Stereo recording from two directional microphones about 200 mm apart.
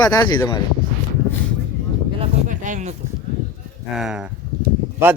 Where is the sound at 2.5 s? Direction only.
40° right (ahead or behind).